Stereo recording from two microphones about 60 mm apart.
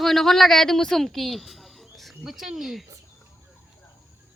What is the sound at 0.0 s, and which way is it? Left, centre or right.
A woman's voice, centre.